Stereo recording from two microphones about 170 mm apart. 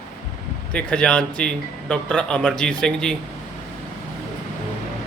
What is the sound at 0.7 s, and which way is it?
Speech, 5° left (ahead or behind).